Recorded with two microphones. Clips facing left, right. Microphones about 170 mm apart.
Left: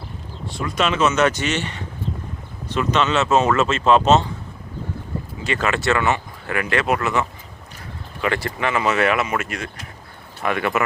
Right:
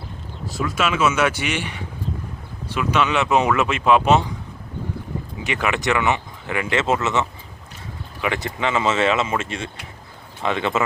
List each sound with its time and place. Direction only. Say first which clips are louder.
0.4 s speech: left 1 dB; 5° right (ahead or behind)
5.4 s speech: left 1 dB; 15° right (ahead or behind)